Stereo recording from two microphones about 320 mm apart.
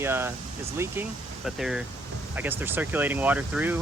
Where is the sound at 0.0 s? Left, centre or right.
Centre.